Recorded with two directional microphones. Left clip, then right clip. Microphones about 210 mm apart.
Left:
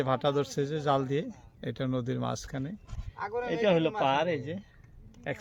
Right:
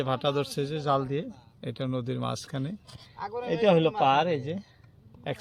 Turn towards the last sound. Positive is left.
turn(degrees=-25)  # may be behind; listen again after turning